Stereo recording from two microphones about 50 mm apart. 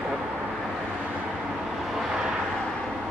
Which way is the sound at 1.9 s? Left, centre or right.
Centre.